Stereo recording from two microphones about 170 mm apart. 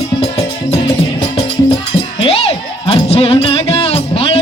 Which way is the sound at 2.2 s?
35° left (ahead or behind).